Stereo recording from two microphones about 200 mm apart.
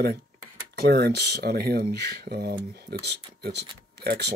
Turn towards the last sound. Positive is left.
turn(degrees=-55)  # may be behind; listen again after turning